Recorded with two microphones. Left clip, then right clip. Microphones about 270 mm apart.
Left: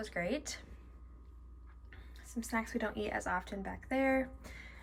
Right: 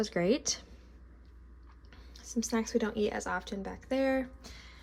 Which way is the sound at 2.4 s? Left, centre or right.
Centre.